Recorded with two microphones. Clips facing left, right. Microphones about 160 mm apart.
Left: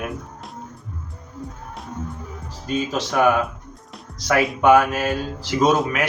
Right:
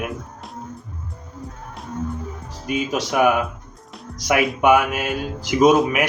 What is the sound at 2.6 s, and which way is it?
Speech, 10° right (ahead or behind).